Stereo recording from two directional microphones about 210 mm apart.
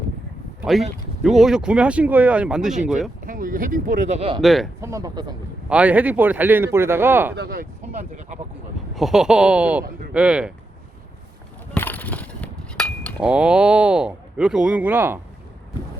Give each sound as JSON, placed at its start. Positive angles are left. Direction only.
{"t": 0.6, "sound": "speech", "side_deg": 0}
{"t": 3.2, "sound": "speech", "side_deg": -40}
{"t": 4.4, "sound": "speech", "side_deg": 0}
{"t": 4.8, "sound": "speech", "side_deg": -15}
{"t": 5.6, "sound": "speech", "side_deg": -5}
{"t": 7.3, "sound": "speech", "side_deg": -45}
{"t": 9.0, "sound": "speech", "side_deg": 0}
{"t": 11.7, "sound": "a sound", "side_deg": 10}
{"t": 13.2, "sound": "speech", "side_deg": -5}